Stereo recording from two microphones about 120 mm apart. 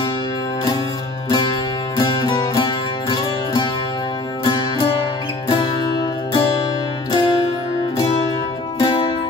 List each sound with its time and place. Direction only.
1.3 s music: 35° left (ahead or behind)
8.7 s music: 45° left (ahead or behind)